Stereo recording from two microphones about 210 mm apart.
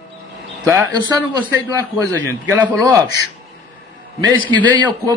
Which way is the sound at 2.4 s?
5° right (ahead or behind).